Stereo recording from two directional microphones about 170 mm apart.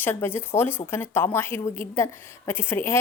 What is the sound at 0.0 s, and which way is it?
A woman's voice, 15° left (ahead or behind).